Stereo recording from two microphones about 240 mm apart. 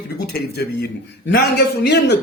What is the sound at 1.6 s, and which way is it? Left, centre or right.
Music, left.